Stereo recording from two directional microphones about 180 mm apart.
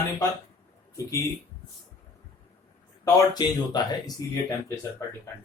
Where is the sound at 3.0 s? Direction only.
20° left (ahead or behind).